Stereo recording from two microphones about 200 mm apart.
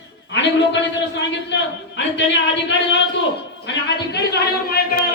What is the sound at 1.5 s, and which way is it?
A man's voice, 60° left (ahead or behind).